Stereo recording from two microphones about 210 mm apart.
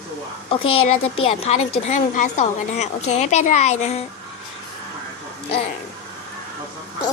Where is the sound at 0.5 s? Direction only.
25° left (ahead or behind).